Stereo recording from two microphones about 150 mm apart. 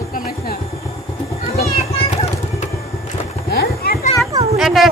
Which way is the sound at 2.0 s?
40° left (ahead or behind).